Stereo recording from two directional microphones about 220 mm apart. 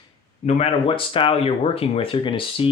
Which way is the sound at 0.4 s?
25° left (ahead or behind).